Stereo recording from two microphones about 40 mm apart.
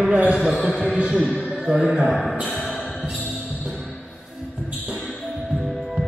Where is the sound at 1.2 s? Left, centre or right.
Left.